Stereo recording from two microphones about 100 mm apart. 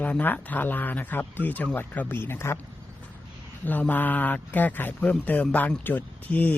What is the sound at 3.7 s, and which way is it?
Speech, 15° left (ahead or behind).